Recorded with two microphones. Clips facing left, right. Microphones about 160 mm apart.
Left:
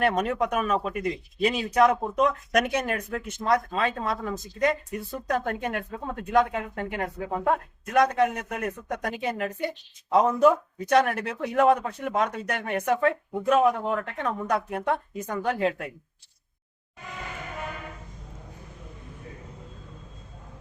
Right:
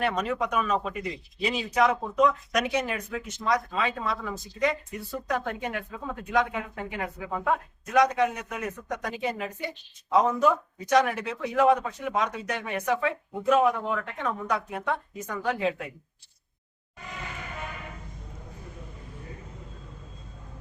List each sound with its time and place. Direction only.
0.0 s a man's voice: 55° left (ahead or behind)